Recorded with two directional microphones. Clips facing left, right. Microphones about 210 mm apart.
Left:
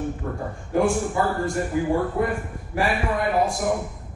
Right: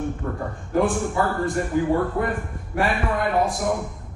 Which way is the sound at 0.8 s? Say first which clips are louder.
Even; centre (ahead or behind).